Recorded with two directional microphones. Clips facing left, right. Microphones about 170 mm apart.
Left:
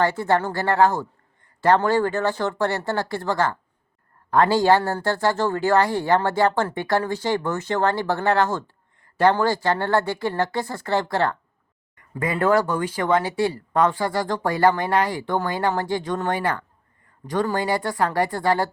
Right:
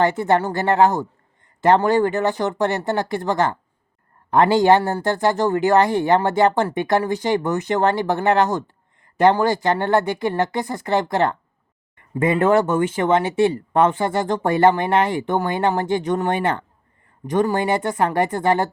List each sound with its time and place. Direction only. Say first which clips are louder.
0.0 s speech: right 3 dB; 20° right (ahead or behind)